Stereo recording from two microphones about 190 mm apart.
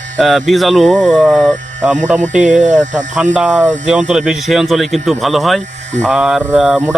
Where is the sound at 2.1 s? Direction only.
40° right (ahead or behind).